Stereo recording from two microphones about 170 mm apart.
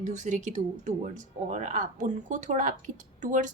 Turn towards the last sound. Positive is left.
turn(degrees=-50)  # may be behind; listen again after turning